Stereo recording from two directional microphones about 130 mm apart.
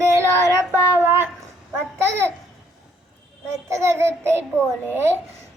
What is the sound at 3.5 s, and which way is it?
Child singing, 20° right (ahead or behind).